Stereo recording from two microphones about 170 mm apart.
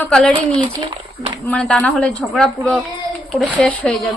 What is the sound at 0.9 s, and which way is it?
Speech, 30° right (ahead or behind).